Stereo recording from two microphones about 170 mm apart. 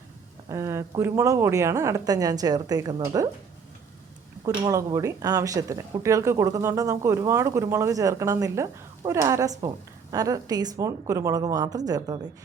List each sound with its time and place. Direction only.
0.4 s speech: 15° right (ahead or behind)
4.4 s speech: 20° right (ahead or behind)